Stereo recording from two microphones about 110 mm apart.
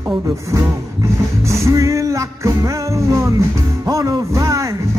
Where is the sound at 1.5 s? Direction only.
30° right (ahead or behind).